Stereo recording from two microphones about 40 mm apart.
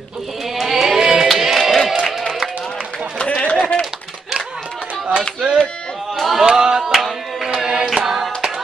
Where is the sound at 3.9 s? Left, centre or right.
Centre.